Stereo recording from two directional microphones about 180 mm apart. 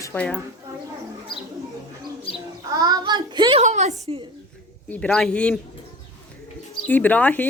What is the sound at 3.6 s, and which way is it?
Speech, 40° right (ahead or behind).